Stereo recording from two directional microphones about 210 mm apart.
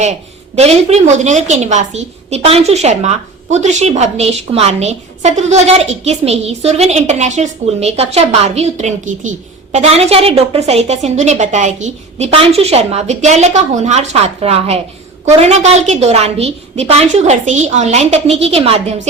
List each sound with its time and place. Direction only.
0.0 s a woman's voice: 30° right (ahead or behind)